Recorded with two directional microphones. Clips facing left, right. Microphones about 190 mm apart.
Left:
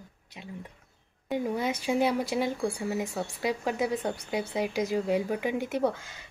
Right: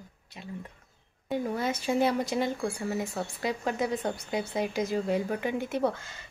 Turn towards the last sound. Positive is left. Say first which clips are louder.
# left 1 dB
turn(degrees=10)  # may be behind; listen again after turning